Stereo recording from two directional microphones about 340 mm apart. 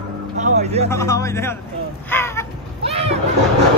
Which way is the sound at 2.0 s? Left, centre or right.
Centre.